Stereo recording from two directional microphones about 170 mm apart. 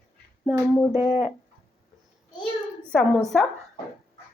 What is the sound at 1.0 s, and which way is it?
Speech, 40° left (ahead or behind).